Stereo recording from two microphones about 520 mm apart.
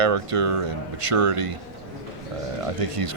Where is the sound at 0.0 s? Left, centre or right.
Right.